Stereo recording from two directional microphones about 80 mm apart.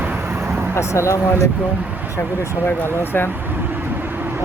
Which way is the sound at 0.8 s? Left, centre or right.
Left.